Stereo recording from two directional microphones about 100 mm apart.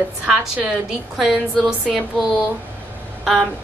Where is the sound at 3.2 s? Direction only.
Centre (ahead or behind).